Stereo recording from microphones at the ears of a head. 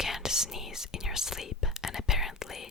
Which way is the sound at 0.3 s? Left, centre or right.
Centre.